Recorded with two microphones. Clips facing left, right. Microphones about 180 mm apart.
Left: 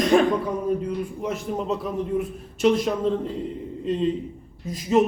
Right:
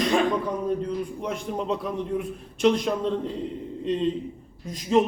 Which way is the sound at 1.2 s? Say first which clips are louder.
Left 3 dB; centre (ahead or behind).